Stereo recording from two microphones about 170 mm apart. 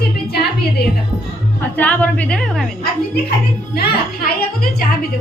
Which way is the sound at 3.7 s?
70° left (ahead or behind).